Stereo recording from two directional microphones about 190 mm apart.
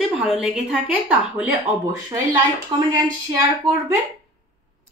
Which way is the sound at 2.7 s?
25° right (ahead or behind).